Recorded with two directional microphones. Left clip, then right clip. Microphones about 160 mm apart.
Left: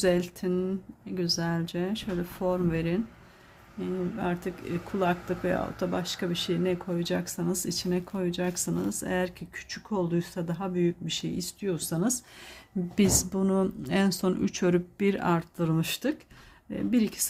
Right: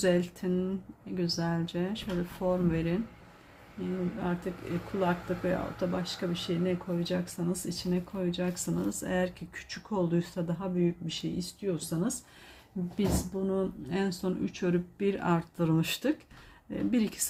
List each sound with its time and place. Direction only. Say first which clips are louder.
0.0 s speech: left 2 dB; 20° left (ahead or behind)
4.9 s speech: left 3 dB; 35° left (ahead or behind)
10.8 s speech: left 4 dB; 40° left (ahead or behind)
13.0 s a woman's voice: left 6 dB; 60° left (ahead or behind); by 17.2 s 15° left (ahead or behind)